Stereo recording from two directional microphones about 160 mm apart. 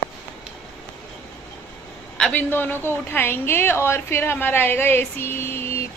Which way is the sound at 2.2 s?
10° left (ahead or behind).